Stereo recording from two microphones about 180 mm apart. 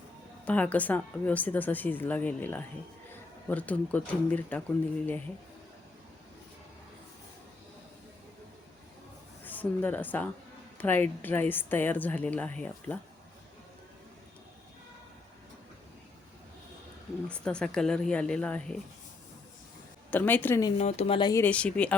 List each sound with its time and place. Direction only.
0.4 s speech: 10° left (ahead or behind)
9.4 s a woman's voice: 10° left (ahead or behind)
17.2 s a woman's voice: 5° left (ahead or behind)
20.1 s speech: 10° left (ahead or behind)
20.7 s speech: 35° left (ahead or behind)
21.2 s speech: 20° left (ahead or behind)
21.4 s speech: 5° left (ahead or behind)